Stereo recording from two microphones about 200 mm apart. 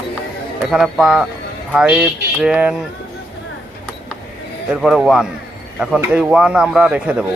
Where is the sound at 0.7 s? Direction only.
Centre (ahead or behind).